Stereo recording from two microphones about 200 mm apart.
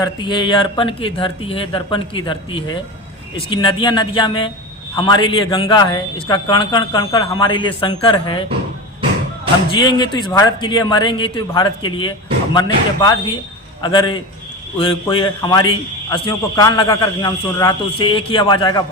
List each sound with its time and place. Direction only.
0.0 s a man's voice: 20° left (ahead or behind)
9.8 s a man's voice: 20° left (ahead or behind)